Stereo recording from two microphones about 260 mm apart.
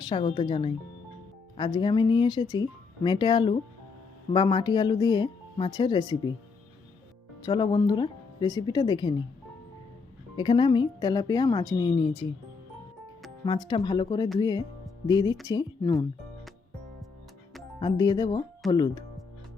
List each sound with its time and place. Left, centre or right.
0.0 s speech: centre
7.4 s speech: centre
10.3 s speech: centre
13.4 s speech: centre
17.7 s speech: centre